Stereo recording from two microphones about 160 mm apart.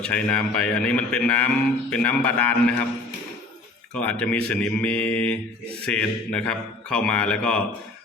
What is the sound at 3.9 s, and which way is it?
A man's voice, 5° left (ahead or behind).